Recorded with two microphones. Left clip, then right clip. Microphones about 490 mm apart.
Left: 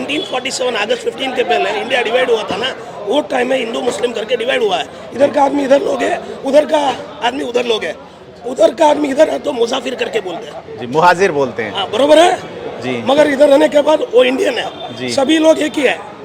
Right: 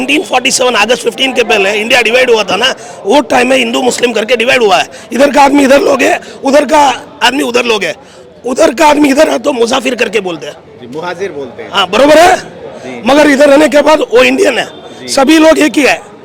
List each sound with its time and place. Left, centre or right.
0.1 s speech: right
11.0 s a man's voice: left
11.7 s speech: right